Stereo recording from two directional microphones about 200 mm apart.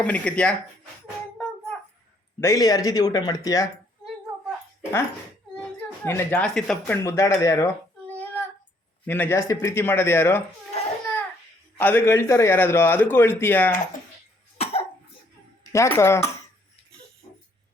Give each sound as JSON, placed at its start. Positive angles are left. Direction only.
{"t": 0.0, "sound": "speech", "side_deg": 5}
{"t": 2.4, "sound": "speech", "side_deg": 15}
{"t": 6.1, "sound": "speech", "side_deg": 10}
{"t": 8.2, "sound": "child singing", "side_deg": 10}
{"t": 9.0, "sound": "speech", "side_deg": 10}
{"t": 11.0, "sound": "babbling", "side_deg": 5}
{"t": 11.8, "sound": "speech", "side_deg": 10}
{"t": 14.6, "sound": "cough", "side_deg": 30}
{"t": 15.7, "sound": "speech", "side_deg": 15}